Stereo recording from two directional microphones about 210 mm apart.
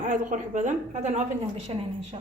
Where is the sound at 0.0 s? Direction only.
35° right (ahead or behind).